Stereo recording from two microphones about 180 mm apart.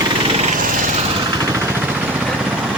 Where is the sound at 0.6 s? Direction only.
45° right (ahead or behind).